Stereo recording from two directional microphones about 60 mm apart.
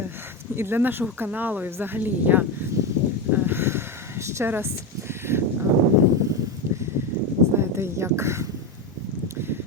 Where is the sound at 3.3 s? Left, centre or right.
Right.